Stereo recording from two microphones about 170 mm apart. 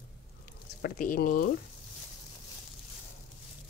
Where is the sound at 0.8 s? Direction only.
55° left (ahead or behind).